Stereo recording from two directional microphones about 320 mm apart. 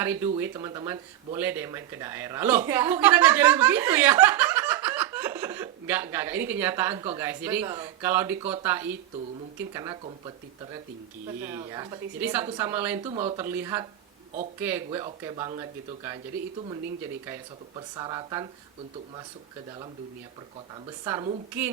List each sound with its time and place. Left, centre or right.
0.0 s speech: centre
13.0 s speech: centre
13.4 s speech: centre
17.2 s speech: centre
21.0 s speech: centre